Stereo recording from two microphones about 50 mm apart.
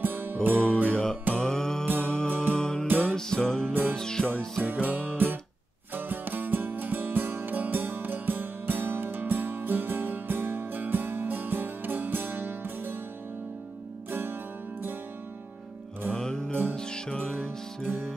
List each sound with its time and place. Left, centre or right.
0.0 s music: right
1.3 s music: centre
2.9 s music: right
3.2 s music: centre
4.6 s music: right
16.1 s music: centre